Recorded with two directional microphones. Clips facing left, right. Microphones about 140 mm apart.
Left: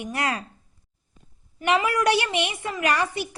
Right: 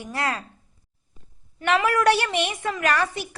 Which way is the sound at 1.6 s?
15° left (ahead or behind).